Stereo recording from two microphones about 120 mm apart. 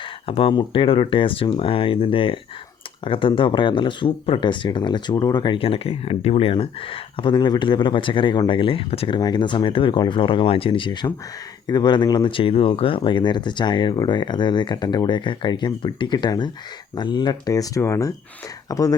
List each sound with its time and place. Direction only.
0.3 s speech: 50° left (ahead or behind)
5.5 s speech: 50° left (ahead or behind)
9.1 s speech: 40° left (ahead or behind)